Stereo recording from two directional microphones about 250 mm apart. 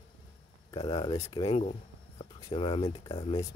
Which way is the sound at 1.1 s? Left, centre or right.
Centre.